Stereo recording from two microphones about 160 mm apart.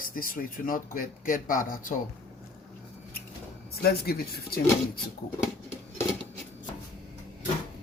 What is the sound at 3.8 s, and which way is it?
Speech, 75° left (ahead or behind).